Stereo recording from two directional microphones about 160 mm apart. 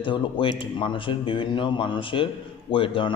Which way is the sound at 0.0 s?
30° left (ahead or behind).